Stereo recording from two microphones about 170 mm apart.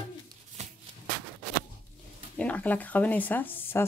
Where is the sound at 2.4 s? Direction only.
10° left (ahead or behind).